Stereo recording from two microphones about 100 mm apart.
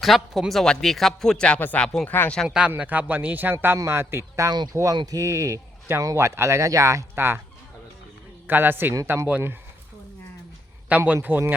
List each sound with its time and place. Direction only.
0.0 s speech: centre (ahead or behind)
2.0 s speech: 20° left (ahead or behind)
2.6 s a man's voice: 15° right (ahead or behind)
8.4 s a man's voice: 20° right (ahead or behind)
10.8 s speech: 15° right (ahead or behind)